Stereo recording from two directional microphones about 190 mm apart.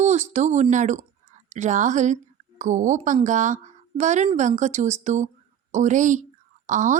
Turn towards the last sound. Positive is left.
turn(degrees=-40)  # may be behind; listen again after turning